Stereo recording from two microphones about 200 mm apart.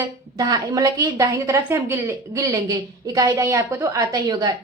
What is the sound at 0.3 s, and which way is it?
A woman's voice, 20° right (ahead or behind).